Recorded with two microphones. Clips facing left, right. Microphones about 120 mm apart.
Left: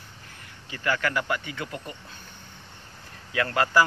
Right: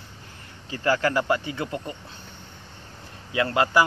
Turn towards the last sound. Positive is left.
turn(degrees=-20)  # may be behind; listen again after turning